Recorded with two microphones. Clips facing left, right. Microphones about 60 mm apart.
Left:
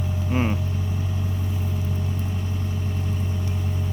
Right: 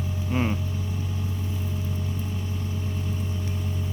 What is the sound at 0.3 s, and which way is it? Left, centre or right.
Vehicle, centre.